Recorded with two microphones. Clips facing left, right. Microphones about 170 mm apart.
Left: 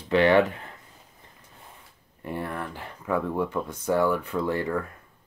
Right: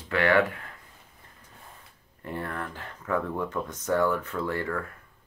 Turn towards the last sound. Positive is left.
turn(degrees=15)  # may be behind; listen again after turning